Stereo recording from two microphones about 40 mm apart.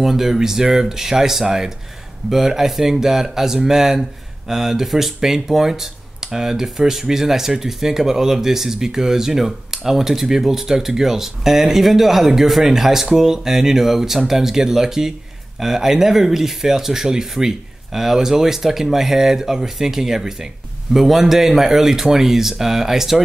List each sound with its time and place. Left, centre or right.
0.0 s speech: centre